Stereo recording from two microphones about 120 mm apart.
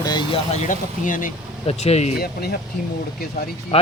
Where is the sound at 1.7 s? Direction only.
60° left (ahead or behind).